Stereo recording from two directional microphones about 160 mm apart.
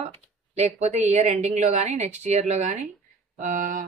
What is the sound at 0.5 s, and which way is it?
A woman's voice, 45° right (ahead or behind).